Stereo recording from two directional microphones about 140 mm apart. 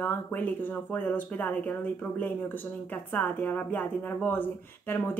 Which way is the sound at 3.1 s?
10° left (ahead or behind).